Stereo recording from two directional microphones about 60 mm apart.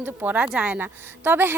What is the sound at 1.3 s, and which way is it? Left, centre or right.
Speech, right.